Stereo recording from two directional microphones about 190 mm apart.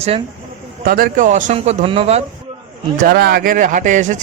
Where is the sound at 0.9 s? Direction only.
50° right (ahead or behind); by 2.2 s 30° right (ahead or behind).